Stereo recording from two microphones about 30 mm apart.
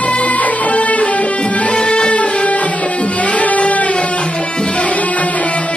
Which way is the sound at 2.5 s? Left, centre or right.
Left.